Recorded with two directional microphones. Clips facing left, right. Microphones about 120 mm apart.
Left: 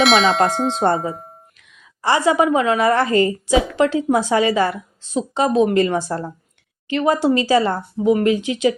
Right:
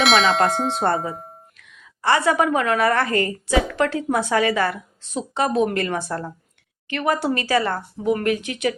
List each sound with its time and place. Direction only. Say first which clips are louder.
0.0 s tubular bells: left 2 dB; centre (ahead or behind)
2.0 s a woman's voice: left 2 dB; 20° left (ahead or behind)